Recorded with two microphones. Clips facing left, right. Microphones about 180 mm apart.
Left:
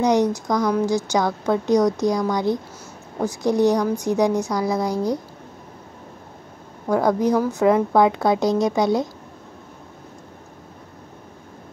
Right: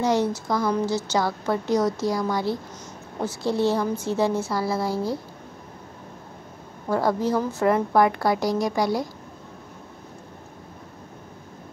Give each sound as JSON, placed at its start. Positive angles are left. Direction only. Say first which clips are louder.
{"t": 0.0, "sound": "a woman's voice", "louder": "left 4 dB", "side_deg": 15}
{"t": 6.9, "sound": "a woman's voice", "louder": "left 4 dB", "side_deg": 15}